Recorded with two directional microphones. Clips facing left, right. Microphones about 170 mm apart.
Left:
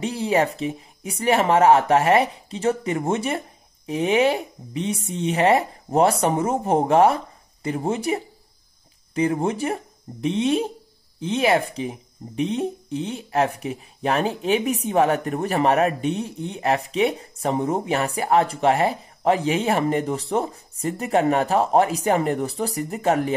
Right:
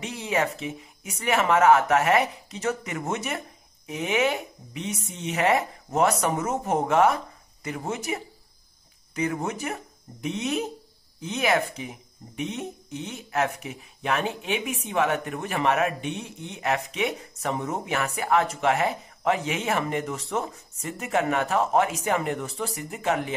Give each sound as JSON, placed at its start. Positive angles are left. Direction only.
{"t": 0.0, "sound": "speech", "side_deg": 35}